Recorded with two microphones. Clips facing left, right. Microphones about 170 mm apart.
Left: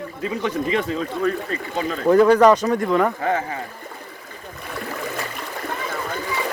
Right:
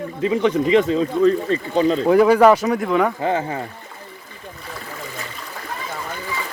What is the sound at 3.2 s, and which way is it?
Speech, 25° right (ahead or behind).